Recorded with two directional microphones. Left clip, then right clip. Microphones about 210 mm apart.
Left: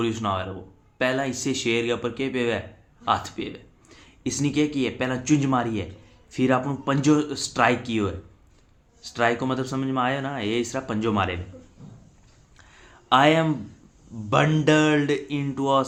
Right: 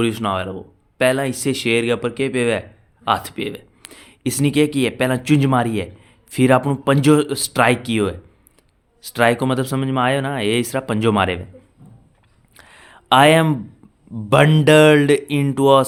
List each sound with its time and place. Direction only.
0.0 s speech: 45° right (ahead or behind)
12.5 s a sound: 55° right (ahead or behind)
14.3 s speech: 55° right (ahead or behind)